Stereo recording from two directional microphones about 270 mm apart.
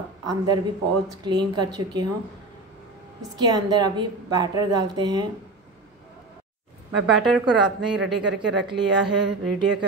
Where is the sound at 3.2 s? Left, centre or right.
Centre.